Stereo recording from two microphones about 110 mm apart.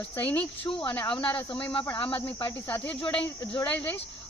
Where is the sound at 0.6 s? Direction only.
45° left (ahead or behind).